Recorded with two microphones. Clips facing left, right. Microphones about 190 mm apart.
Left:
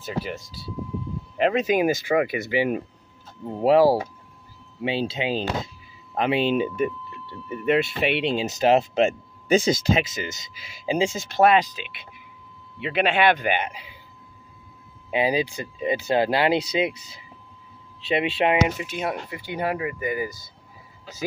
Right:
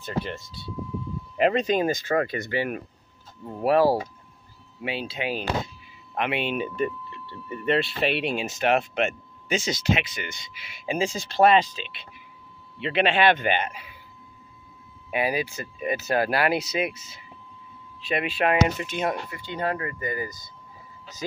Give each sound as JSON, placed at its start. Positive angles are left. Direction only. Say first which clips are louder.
{"t": 0.0, "sound": "speech", "louder": "left 1 dB", "side_deg": 5}
{"t": 4.8, "sound": "speech", "louder": "left 4 dB", "side_deg": 25}
{"t": 7.4, "sound": "speech", "louder": "left 3 dB", "side_deg": 10}
{"t": 8.5, "sound": "speech", "louder": "left 5 dB", "side_deg": 40}
{"t": 8.7, "sound": "speech", "louder": "left 5 dB", "side_deg": 30}
{"t": 11.0, "sound": "speech", "louder": "left 1 dB", "side_deg": 15}
{"t": 15.0, "sound": "speech", "louder": "left 3 dB", "side_deg": 20}
{"t": 18.6, "sound": "speech", "louder": "even", "side_deg": 5}